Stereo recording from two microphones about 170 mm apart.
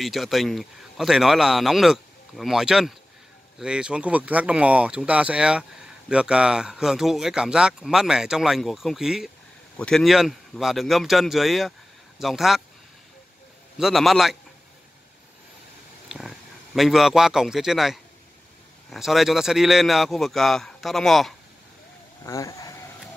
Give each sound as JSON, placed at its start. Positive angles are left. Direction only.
{"t": 0.0, "sound": "speech", "side_deg": 0}
{"t": 13.7, "sound": "speech", "side_deg": 0}
{"t": 16.1, "sound": "a man's voice", "side_deg": 0}
{"t": 22.2, "sound": "vehicle", "side_deg": 20}